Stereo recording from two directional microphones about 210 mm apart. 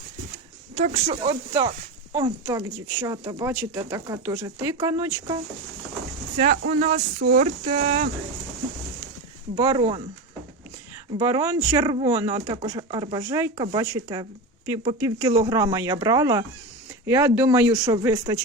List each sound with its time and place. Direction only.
0.8 s speech: 30° right (ahead or behind)
2.1 s speech: 15° right (ahead or behind)
6.3 s speech: 35° right (ahead or behind)
9.6 s speech: 20° right (ahead or behind)
11.2 s speech: 15° right (ahead or behind)